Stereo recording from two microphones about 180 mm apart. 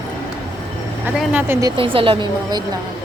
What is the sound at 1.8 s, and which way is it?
Speech, 30° right (ahead or behind).